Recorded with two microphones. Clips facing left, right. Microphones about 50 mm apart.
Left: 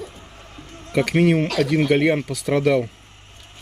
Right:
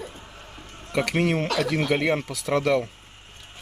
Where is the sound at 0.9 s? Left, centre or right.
Centre.